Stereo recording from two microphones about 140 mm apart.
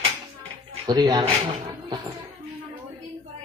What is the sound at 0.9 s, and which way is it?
A man's voice, 30° right (ahead or behind).